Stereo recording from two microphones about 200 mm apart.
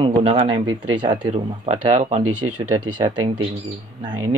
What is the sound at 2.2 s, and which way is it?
Speech, 90° right.